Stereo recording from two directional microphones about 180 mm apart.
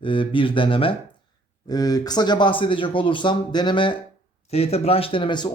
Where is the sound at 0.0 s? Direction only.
30° left (ahead or behind).